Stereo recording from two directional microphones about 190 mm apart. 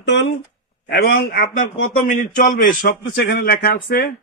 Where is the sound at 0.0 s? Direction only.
65° left (ahead or behind).